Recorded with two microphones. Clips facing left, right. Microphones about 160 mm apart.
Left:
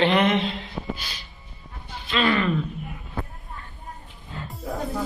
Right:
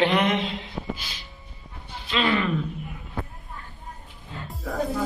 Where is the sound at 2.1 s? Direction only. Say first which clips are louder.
Left 1 dB; 10° right (ahead or behind).